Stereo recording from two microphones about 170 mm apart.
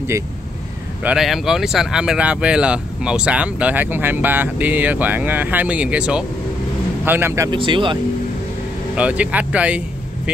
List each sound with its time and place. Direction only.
1.0 s speech: centre (ahead or behind)
7.5 s speech: 30° right (ahead or behind)
8.9 s speech: 10° right (ahead or behind)